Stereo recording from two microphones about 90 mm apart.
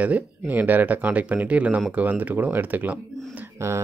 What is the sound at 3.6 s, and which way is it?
Speech, 35° right (ahead or behind).